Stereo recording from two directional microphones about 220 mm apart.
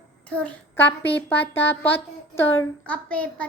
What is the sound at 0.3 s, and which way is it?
Child singing, 5° left (ahead or behind).